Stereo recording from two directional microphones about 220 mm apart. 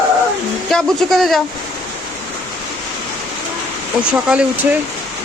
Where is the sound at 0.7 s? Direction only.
Centre (ahead or behind).